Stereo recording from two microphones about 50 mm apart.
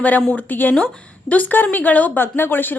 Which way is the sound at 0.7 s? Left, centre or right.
Left.